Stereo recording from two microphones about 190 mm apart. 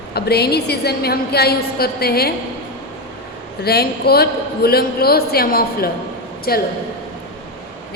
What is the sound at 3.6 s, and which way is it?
A man's voice, 55° left (ahead or behind).